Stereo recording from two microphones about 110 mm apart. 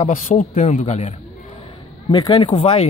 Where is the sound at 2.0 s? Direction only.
40° left (ahead or behind).